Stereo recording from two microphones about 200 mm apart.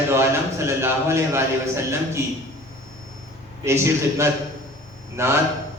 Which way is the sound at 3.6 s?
15° right (ahead or behind).